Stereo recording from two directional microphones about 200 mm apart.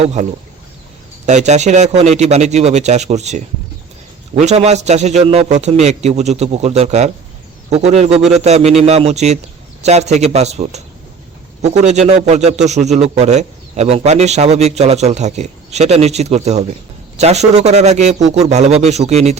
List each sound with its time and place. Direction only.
0.0 s a man's voice: 35° right (ahead or behind)
1.3 s a man's voice: 35° right (ahead or behind)